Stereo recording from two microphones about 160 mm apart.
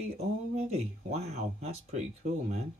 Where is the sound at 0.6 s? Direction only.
40° right (ahead or behind).